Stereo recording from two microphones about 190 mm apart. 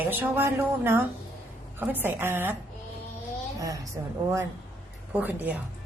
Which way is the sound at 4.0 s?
15° right (ahead or behind).